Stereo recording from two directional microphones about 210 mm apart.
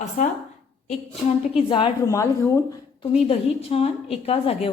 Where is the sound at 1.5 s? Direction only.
25° left (ahead or behind).